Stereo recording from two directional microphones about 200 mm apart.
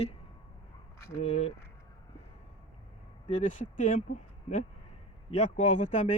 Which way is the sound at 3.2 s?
40° left (ahead or behind).